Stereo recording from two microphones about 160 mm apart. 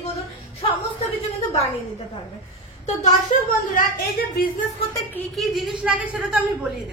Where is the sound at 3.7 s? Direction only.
65° left (ahead or behind).